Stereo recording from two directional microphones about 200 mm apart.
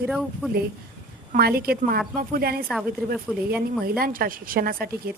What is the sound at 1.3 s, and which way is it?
A woman's voice, 50° right (ahead or behind).